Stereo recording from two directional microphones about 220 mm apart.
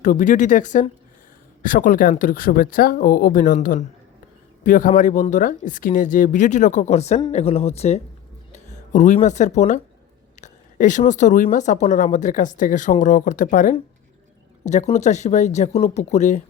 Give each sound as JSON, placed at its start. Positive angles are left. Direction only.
{"t": 0.0, "sound": "speech", "side_deg": 35}